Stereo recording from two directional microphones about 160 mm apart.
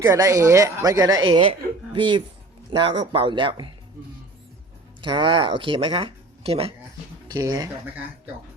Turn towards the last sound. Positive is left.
turn(degrees=-25)  # may be behind; listen again after turning